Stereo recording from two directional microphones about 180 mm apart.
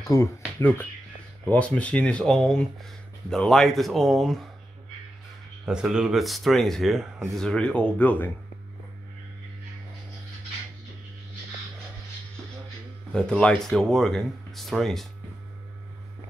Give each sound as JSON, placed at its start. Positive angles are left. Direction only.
{"t": 0.0, "sound": "speech", "side_deg": 15}
{"t": 5.7, "sound": "speech", "side_deg": -5}
{"t": 13.1, "sound": "speech", "side_deg": 5}